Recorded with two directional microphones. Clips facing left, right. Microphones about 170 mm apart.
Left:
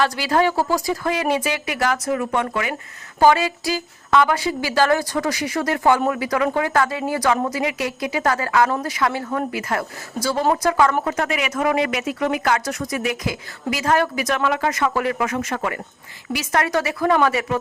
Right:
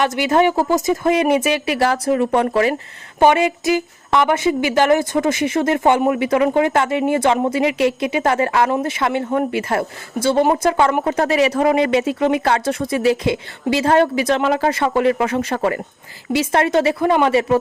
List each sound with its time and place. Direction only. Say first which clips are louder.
0.0 s speech: right 3 dB; 20° right (ahead or behind)